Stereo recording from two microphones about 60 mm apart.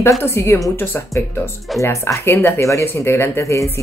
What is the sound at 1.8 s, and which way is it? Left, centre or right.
Speech, left.